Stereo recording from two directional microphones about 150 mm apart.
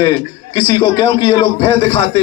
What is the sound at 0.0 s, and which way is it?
Speech, 35° left (ahead or behind).